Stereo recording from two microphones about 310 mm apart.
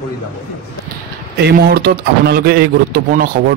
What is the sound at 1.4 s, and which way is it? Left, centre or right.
A man's voice, right.